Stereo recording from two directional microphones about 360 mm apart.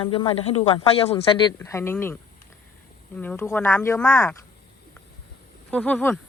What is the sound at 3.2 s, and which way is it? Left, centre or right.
Speech, centre.